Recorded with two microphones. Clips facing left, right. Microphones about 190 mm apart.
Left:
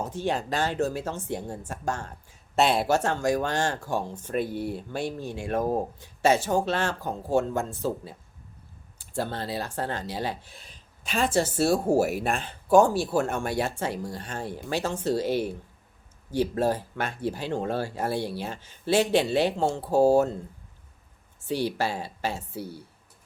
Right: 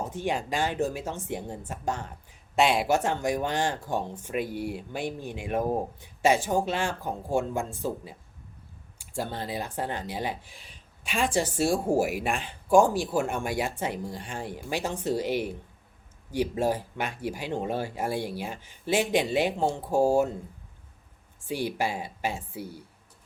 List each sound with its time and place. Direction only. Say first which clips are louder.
0.1 s speech: left 1 dB; 15° right (ahead or behind)
10.6 s a sound: left 1 dB; 40° left (ahead or behind)
11.2 s speech: left 2 dB; 15° right (ahead or behind)
21.4 s speech: left 2 dB; 10° right (ahead or behind)